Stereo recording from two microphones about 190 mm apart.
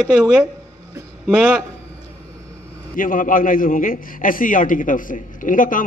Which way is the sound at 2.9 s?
45° left (ahead or behind).